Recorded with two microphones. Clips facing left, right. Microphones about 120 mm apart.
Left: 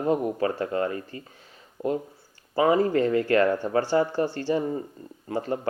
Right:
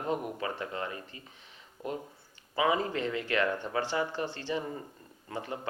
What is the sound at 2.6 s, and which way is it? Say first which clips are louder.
Speech: left 8 dB; 45° left (ahead or behind).